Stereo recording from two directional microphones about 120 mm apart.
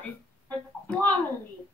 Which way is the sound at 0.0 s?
10° left (ahead or behind).